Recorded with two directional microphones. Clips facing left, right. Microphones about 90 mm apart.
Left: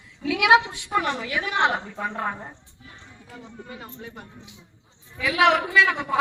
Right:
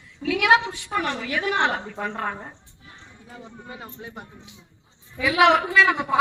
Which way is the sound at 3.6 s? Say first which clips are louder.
Right 3 dB; 25° right (ahead or behind).